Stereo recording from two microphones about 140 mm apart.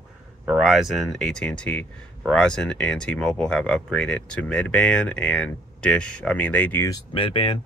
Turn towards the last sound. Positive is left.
turn(degrees=35)  # may be behind; listen again after turning